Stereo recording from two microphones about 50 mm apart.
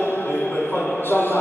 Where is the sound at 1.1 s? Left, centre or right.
Left.